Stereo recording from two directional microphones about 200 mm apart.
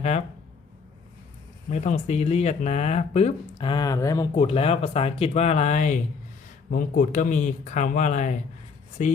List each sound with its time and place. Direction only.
1.7 s speech: 35° left (ahead or behind); by 4.3 s 15° left (ahead or behind)
4.4 s speech: 30° left (ahead or behind)